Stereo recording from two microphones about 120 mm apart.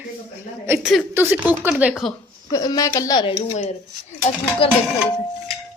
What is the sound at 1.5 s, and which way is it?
Speech, 15° right (ahead or behind).